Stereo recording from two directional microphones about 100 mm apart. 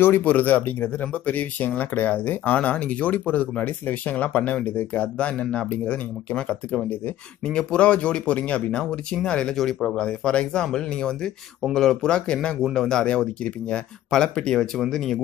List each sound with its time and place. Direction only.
0.0 s speech: 20° left (ahead or behind); by 15.2 s 5° left (ahead or behind)